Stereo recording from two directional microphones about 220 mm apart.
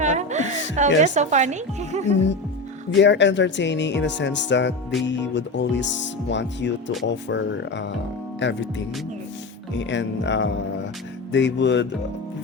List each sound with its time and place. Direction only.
0.0 s music: 30° right (ahead or behind)
1.0 s speech: 35° right (ahead or behind)
2.9 s speech: 55° left (ahead or behind)
9.7 s speech: 55° left (ahead or behind)